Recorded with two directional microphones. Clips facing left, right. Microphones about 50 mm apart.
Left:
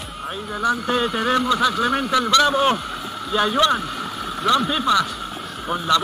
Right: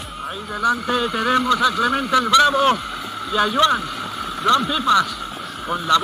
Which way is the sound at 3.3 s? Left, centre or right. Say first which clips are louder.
Right 1 dB; left.